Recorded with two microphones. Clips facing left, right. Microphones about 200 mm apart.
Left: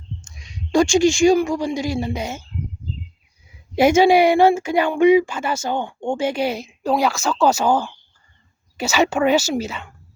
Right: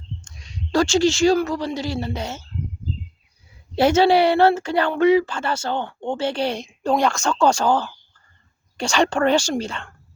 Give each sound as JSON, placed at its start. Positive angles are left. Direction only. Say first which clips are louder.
{"t": 0.2, "sound": "speech", "louder": "right 1 dB", "side_deg": 10}
{"t": 3.8, "sound": "speech", "louder": "left 2 dB", "side_deg": 10}